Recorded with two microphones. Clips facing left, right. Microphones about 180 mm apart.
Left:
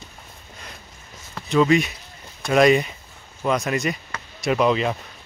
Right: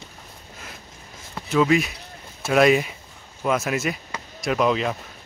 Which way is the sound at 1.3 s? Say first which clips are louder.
Left 2 dB; 5° right (ahead or behind).